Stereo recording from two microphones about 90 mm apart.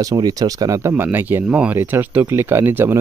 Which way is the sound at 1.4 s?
10° right (ahead or behind).